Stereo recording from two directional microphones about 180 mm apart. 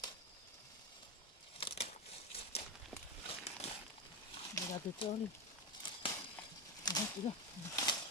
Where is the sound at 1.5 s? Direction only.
30° left (ahead or behind).